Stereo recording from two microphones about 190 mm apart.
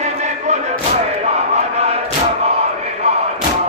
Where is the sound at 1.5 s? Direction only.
35° right (ahead or behind).